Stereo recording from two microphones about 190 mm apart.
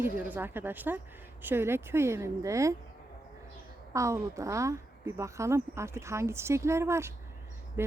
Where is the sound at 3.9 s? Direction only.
15° right (ahead or behind).